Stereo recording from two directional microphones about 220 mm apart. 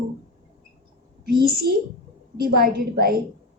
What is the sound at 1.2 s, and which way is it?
A woman's voice, 45° right (ahead or behind).